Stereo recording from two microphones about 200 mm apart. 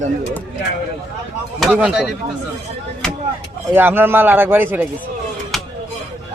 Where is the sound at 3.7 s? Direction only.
10° right (ahead or behind).